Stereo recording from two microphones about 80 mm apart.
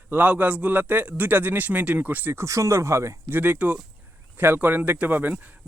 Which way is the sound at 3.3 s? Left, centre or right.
Right.